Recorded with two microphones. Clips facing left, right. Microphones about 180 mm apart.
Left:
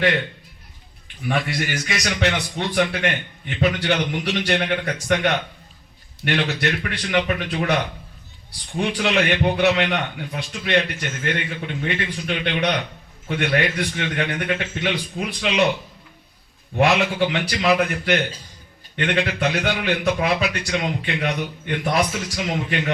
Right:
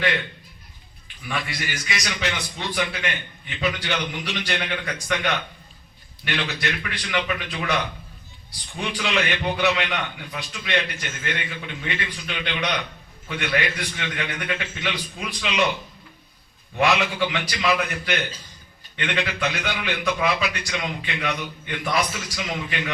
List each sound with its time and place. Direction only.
1.3 s a man's voice: 55° left (ahead or behind)
8.8 s a man's voice: 50° left (ahead or behind)
16.7 s a man's voice: 55° left (ahead or behind)
18.9 s a man's voice: 40° left (ahead or behind)
19.4 s speech: 55° left (ahead or behind)
19.9 s a man's voice: 40° left (ahead or behind)